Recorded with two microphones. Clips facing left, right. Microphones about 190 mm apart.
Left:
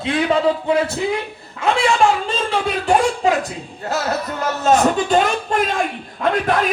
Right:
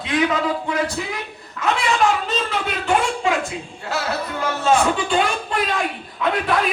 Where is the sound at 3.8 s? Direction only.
45° left (ahead or behind).